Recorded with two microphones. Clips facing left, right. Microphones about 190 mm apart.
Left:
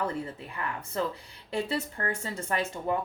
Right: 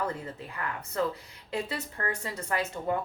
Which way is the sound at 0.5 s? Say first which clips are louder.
Even; 30° left (ahead or behind).